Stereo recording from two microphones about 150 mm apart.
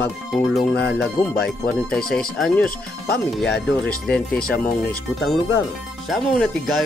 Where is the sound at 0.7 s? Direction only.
90° left.